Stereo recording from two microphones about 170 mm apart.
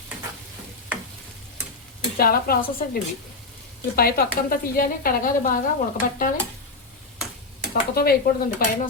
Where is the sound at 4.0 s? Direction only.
60° left (ahead or behind).